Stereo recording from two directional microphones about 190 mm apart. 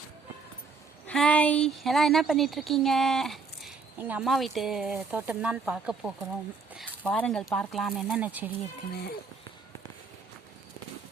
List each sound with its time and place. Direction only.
1.0 s speech: 5° left (ahead or behind)
8.9 s speech: 55° left (ahead or behind)